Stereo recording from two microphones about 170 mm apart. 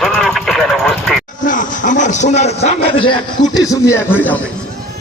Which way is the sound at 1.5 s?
50° left (ahead or behind).